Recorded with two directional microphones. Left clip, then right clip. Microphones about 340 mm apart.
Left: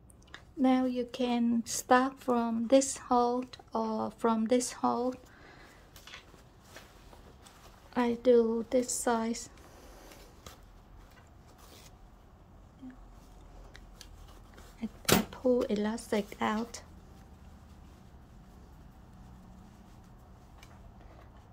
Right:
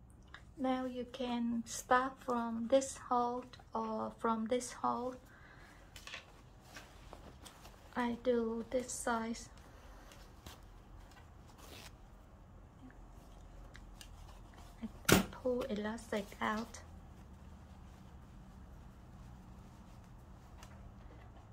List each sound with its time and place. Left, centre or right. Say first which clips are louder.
0.3 s speech: left 9 dB; left
7.9 s speech: left 10 dB; left
14.8 s a sound: left 7 dB; left
15.3 s speech: left 9 dB; left